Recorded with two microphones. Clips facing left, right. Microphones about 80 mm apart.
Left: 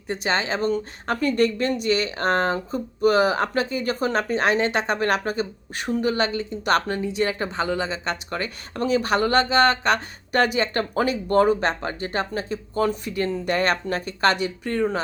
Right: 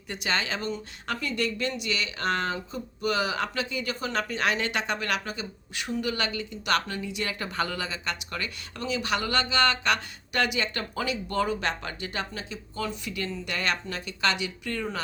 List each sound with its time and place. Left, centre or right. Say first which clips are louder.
0.1 s a woman's voice: left 6 dB; left